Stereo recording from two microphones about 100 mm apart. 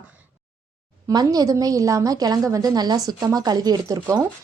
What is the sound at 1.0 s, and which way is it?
Speech, 40° right (ahead or behind).